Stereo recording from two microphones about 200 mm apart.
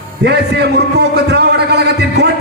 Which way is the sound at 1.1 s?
55° right (ahead or behind).